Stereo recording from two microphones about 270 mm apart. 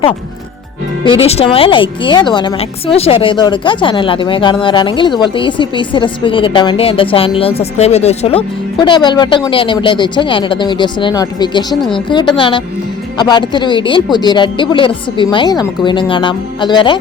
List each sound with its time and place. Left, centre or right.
1.0 s speech: centre
11.7 s speech: centre
11.9 s speech: centre